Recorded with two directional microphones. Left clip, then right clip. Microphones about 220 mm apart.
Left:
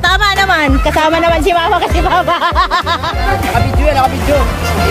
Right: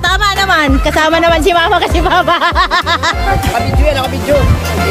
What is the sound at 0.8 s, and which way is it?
Speech, 25° right (ahead or behind).